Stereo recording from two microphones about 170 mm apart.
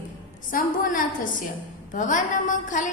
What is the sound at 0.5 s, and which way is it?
A woman's voice, 50° left (ahead or behind).